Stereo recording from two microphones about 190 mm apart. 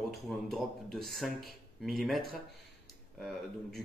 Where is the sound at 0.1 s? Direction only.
Centre (ahead or behind).